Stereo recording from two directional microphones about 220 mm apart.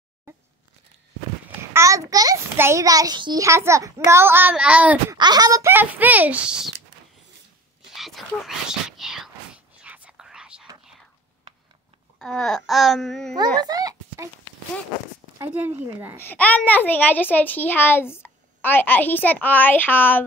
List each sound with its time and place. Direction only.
1.7 s a child's voice: 15° right (ahead or behind)
5.1 s a child's voice: 20° right (ahead or behind)
7.9 s whispering: centre (ahead or behind)
12.2 s speech: 5° left (ahead or behind)
13.6 s a sound: 15° right (ahead or behind)
15.3 s a child's voice: 10° right (ahead or behind)
16.2 s a child's voice: 10° left (ahead or behind)